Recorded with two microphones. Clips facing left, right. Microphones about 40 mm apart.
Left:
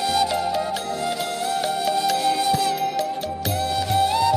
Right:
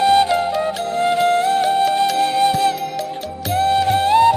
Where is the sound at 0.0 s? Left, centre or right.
Right.